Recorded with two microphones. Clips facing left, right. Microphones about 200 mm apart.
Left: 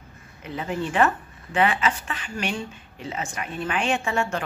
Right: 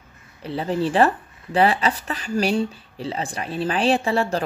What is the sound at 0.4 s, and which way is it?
Speech, 35° right (ahead or behind).